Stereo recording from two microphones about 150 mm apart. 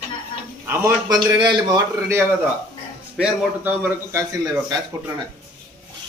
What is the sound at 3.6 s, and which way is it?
Speech, 10° right (ahead or behind).